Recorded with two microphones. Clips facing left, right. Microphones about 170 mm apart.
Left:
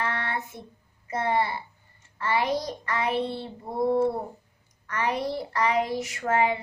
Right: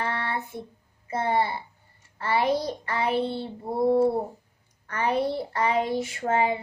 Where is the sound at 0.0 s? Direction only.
30° right (ahead or behind).